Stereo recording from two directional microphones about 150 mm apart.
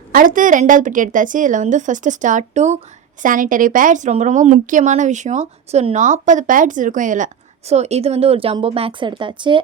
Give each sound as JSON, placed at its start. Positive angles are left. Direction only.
{"t": 0.1, "sound": "speech", "side_deg": -65}
{"t": 7.7, "sound": "speech", "side_deg": -45}